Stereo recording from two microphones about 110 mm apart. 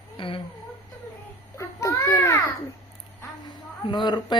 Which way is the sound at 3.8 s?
40° left (ahead or behind).